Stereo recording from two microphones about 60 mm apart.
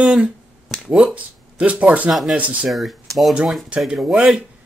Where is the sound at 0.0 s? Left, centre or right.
Right.